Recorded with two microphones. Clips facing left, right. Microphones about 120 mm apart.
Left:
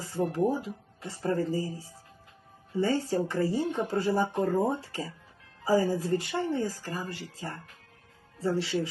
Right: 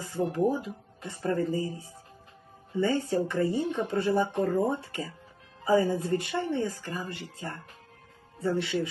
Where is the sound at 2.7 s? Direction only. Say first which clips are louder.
Right 1 dB; 30° left (ahead or behind).